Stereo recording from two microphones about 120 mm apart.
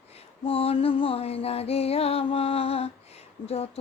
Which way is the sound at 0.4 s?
50° left (ahead or behind).